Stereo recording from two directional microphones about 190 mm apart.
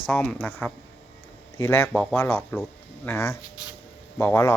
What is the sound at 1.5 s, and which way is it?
Speech, 15° left (ahead or behind).